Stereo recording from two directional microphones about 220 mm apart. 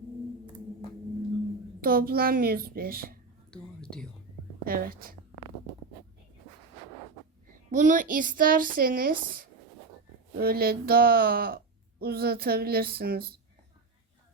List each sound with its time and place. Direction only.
1.8 s speech: 40° right (ahead or behind)
3.5 s a sound: 5° left (ahead or behind)
4.6 s speech: 40° right (ahead or behind)
7.4 s speech: 35° right (ahead or behind)